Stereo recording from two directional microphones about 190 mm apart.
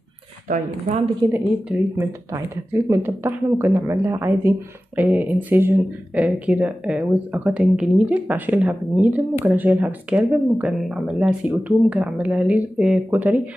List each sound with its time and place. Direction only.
0.5 s speech: 40° right (ahead or behind)
1.3 s speech: 10° right (ahead or behind)